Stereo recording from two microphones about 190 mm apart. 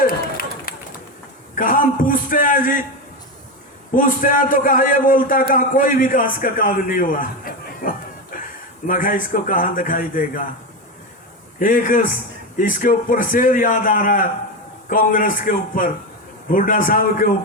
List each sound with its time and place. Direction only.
0.0 s run: 50° left (ahead or behind)
1.5 s a man's voice: 45° left (ahead or behind)
3.9 s a man's voice: 45° left (ahead or behind)
11.6 s a man's voice: 45° left (ahead or behind)